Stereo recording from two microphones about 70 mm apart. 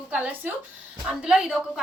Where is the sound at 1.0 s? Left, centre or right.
Centre.